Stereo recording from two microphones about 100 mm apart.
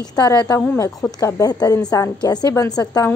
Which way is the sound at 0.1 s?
40° left (ahead or behind).